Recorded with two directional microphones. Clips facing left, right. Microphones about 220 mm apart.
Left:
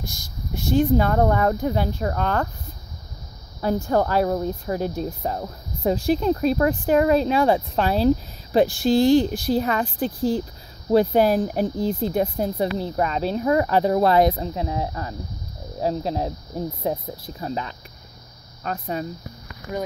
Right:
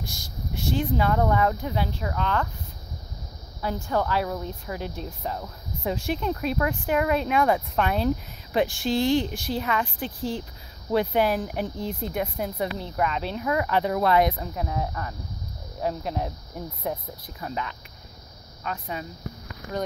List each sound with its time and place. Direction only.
0.0 s speech: 45° left (ahead or behind)
3.6 s speech: 40° left (ahead or behind)